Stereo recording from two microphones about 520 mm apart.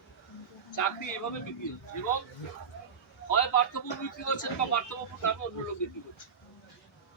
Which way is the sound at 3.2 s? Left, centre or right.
Left.